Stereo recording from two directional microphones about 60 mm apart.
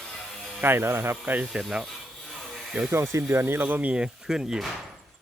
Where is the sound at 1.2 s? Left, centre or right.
Right.